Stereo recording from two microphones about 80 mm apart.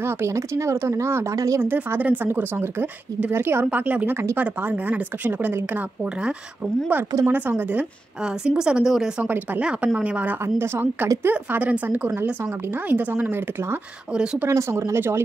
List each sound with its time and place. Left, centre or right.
0.0 s speech: right
1.6 s a woman's voice: right
2.5 s a woman's voice: right
7.2 s a woman's voice: right
8.2 s speech: centre
9.2 s a woman's voice: right
10.4 s a woman's voice: right
14.1 s speech: centre
14.5 s speech: right